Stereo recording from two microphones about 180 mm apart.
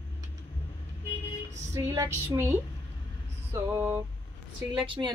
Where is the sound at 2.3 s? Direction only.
15° right (ahead or behind).